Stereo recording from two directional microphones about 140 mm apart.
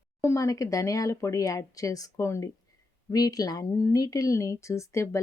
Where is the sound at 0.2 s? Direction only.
20° left (ahead or behind).